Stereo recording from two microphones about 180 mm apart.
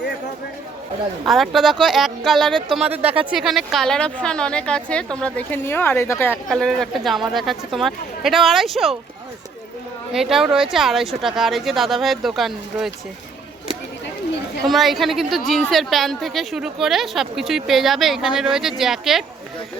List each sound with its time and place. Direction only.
1.2 s a woman's voice: centre (ahead or behind)
3.0 s speech: 35° right (ahead or behind)
3.2 s a woman's voice: centre (ahead or behind)
10.1 s a woman's voice: 5° right (ahead or behind)
14.7 s a woman's voice: centre (ahead or behind)